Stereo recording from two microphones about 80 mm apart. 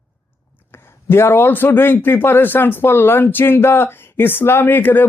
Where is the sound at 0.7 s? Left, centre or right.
Left.